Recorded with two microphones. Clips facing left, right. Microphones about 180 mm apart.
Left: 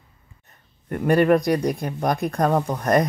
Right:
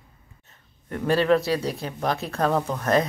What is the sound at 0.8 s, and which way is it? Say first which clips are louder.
Speech: left 3 dB; 15° left (ahead or behind).